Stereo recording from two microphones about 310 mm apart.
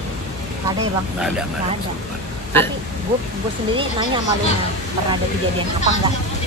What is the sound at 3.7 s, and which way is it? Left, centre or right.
Speech, centre.